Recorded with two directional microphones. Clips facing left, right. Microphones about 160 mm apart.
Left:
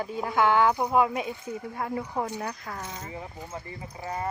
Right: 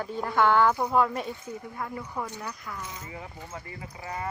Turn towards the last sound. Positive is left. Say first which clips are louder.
# left 2 dB
turn(degrees=30)  # may be behind; listen again after turning